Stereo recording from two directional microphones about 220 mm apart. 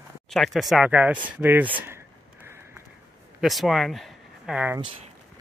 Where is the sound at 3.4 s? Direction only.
Centre (ahead or behind).